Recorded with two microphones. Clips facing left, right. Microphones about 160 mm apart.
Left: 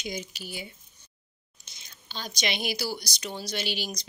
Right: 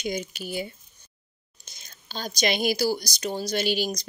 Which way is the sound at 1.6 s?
45° right (ahead or behind).